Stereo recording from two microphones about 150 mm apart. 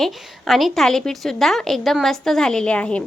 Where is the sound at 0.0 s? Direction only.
Centre (ahead or behind).